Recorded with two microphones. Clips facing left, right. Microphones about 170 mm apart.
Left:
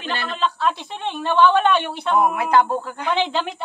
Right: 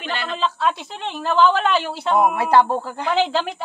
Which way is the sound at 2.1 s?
30° right (ahead or behind).